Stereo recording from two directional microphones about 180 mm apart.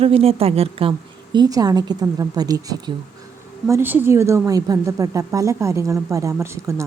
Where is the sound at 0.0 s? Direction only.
30° right (ahead or behind).